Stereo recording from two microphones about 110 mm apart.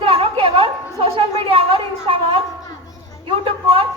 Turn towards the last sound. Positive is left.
turn(degrees=-55)  # may be behind; listen again after turning